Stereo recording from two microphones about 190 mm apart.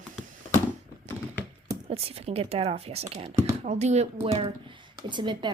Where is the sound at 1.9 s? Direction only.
30° right (ahead or behind).